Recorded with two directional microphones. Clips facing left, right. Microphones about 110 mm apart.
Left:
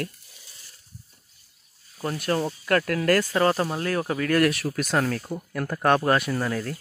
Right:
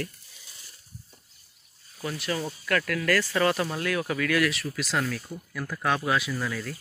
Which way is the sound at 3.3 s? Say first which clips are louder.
Left 3 dB; 35° left (ahead or behind).